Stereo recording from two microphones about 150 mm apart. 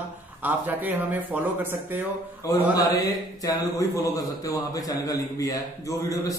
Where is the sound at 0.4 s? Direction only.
10° right (ahead or behind).